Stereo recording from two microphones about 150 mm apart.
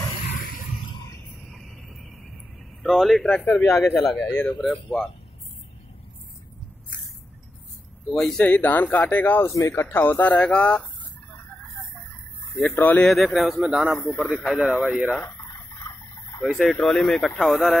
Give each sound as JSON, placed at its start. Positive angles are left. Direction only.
{"t": 0.2, "sound": "a sound", "side_deg": 65}
{"t": 1.5, "sound": "cricket", "side_deg": 0}
{"t": 2.8, "sound": "speech", "side_deg": 0}
{"t": 4.3, "sound": "speech", "side_deg": 15}
{"t": 8.1, "sound": "speech", "side_deg": 5}
{"t": 12.5, "sound": "speech", "side_deg": 10}
{"t": 15.8, "sound": "a sound", "side_deg": 15}
{"t": 16.4, "sound": "speech", "side_deg": 5}